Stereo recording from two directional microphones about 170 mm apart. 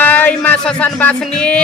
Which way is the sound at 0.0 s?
10° left (ahead or behind).